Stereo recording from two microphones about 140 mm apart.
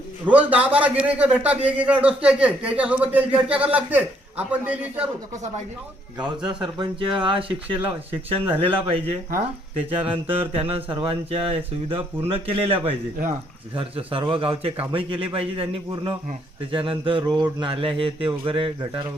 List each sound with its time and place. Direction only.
0.3 s a man's voice: 10° right (ahead or behind)
6.2 s speech: 35° right (ahead or behind)
10.5 s a man's voice: 40° right (ahead or behind)